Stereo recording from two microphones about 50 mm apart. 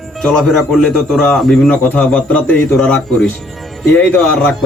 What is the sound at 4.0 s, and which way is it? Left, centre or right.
Speech, left.